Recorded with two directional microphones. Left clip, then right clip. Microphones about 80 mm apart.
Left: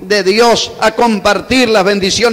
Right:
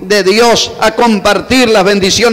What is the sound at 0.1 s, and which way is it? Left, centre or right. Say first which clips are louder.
A man's voice: right 2 dB; right.